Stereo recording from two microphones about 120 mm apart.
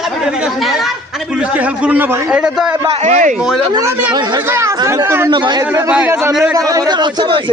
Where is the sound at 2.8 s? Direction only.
90° right.